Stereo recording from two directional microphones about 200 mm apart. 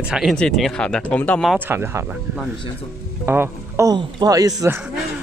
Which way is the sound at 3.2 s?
10° right (ahead or behind).